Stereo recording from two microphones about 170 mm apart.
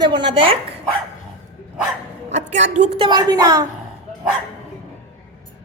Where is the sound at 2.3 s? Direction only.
45° right (ahead or behind).